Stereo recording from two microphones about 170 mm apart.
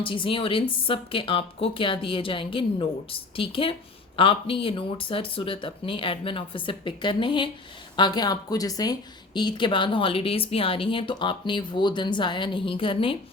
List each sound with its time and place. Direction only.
0.0 s a woman's voice: 30° left (ahead or behind)